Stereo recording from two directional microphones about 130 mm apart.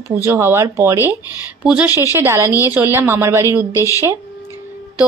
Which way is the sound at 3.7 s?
25° left (ahead or behind).